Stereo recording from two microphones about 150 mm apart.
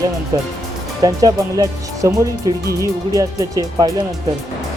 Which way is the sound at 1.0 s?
25° right (ahead or behind).